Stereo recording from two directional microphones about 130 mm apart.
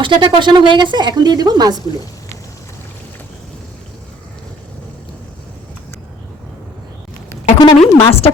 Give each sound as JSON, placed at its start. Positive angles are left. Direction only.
{"t": 0.0, "sound": "a woman's voice", "side_deg": -35}
{"t": 7.6, "sound": "a woman's voice", "side_deg": 35}